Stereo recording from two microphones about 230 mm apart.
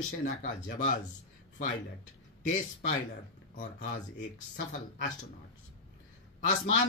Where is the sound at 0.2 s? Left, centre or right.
Left.